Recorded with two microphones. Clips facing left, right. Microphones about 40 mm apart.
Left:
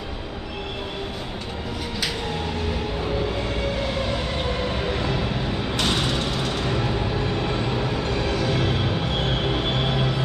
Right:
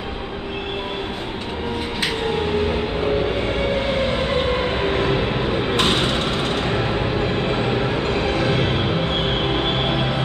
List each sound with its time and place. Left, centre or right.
2.0 s music: right
3.6 s train: right